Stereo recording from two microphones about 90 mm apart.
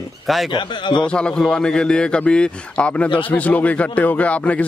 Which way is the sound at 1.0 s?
10° left (ahead or behind).